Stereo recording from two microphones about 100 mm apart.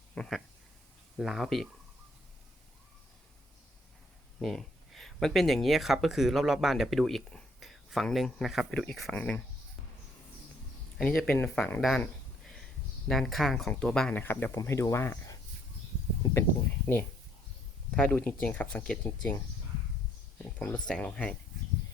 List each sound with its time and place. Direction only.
0.1 s speech: 5° left (ahead or behind)
4.4 s speech: centre (ahead or behind)
10.9 s speech: 5° left (ahead or behind)
13.1 s speech: centre (ahead or behind)
14.1 s speech: 20° left (ahead or behind)
14.5 s speech: 30° left (ahead or behind)
16.2 s a sound: 35° left (ahead or behind)
16.8 s speech: 20° left (ahead or behind)
20.6 s speech: 15° left (ahead or behind)